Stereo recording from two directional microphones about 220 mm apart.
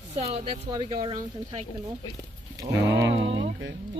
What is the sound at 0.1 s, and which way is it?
Speech, 30° right (ahead or behind).